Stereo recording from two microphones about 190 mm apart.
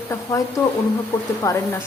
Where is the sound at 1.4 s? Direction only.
15° left (ahead or behind).